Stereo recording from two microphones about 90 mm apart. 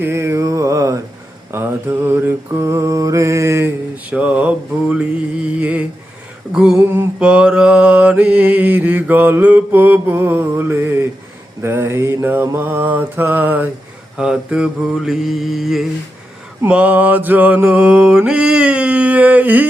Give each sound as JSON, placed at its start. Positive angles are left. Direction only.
{"t": 0.0, "sound": "mantra", "side_deg": -30}
{"t": 1.5, "sound": "mantra", "side_deg": -25}
{"t": 3.9, "sound": "mantra", "side_deg": -15}
{"t": 6.5, "sound": "a sound", "side_deg": -5}
{"t": 6.7, "sound": "mantra", "side_deg": -15}
{"t": 14.2, "sound": "mantra", "side_deg": -10}
{"t": 16.6, "sound": "mantra", "side_deg": -15}